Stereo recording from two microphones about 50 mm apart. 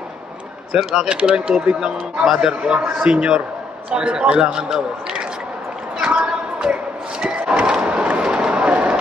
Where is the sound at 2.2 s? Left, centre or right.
Centre.